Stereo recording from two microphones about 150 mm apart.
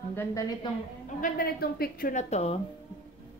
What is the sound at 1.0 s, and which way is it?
A woman's voice, 65° left (ahead or behind).